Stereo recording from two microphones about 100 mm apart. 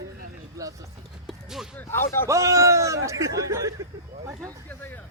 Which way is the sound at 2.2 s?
30° right (ahead or behind).